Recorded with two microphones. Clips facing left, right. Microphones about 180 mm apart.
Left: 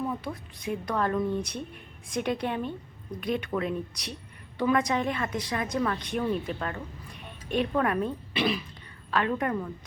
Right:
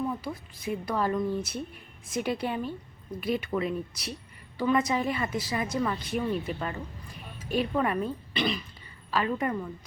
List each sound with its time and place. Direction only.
0.1 s a woman's voice: centre (ahead or behind)